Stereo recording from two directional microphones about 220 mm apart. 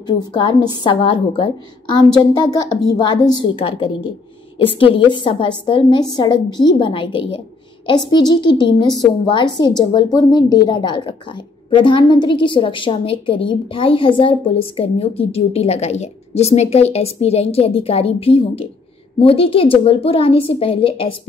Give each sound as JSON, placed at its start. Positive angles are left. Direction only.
{"t": 0.0, "sound": "a woman's voice", "side_deg": 20}